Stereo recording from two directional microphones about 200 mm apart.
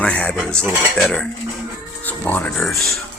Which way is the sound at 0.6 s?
10° right (ahead or behind).